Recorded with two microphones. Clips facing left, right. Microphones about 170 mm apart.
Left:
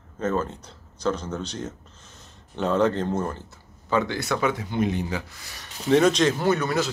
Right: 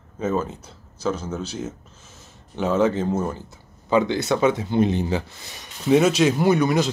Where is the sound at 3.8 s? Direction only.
20° right (ahead or behind).